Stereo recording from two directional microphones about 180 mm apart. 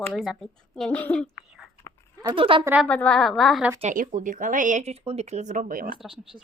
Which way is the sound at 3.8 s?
45° right (ahead or behind).